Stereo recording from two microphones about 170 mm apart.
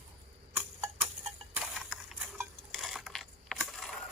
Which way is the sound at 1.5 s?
5° right (ahead or behind).